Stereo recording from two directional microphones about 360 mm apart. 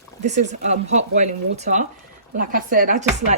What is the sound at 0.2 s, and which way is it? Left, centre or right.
Speech, centre.